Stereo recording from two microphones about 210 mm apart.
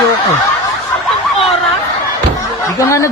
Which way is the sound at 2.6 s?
15° left (ahead or behind).